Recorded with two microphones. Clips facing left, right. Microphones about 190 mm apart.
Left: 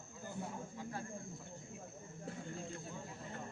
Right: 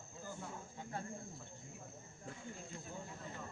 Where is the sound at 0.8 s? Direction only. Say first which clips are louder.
Even; 25° right (ahead or behind).